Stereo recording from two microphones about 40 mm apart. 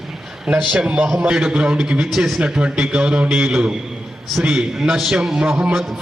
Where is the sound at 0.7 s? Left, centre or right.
Right.